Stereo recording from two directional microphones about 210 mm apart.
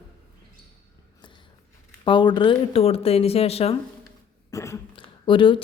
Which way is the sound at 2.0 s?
20° left (ahead or behind).